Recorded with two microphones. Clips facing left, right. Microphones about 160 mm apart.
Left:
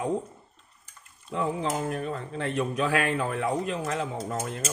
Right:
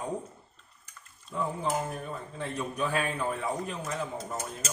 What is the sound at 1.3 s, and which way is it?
Speech, 80° left.